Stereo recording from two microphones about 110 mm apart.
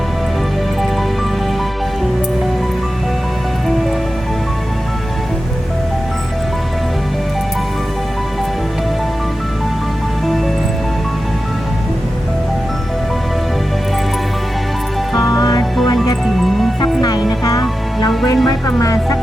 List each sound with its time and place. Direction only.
10.2 s music: centre (ahead or behind)
15.1 s music: 35° left (ahead or behind)
16.4 s music: centre (ahead or behind)
16.8 s music: 40° left (ahead or behind)
18.4 s music: 30° left (ahead or behind)